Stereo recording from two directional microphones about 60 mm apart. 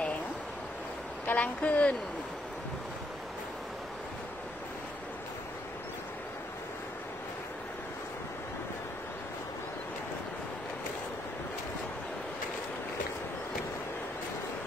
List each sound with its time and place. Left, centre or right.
1.2 s speech: left